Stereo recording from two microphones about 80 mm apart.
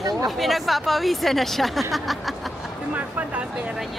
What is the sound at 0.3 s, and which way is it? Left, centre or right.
Speech, centre.